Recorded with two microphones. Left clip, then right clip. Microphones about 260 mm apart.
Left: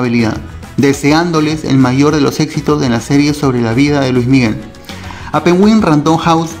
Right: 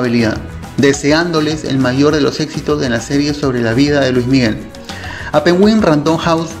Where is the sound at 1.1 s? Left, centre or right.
Centre.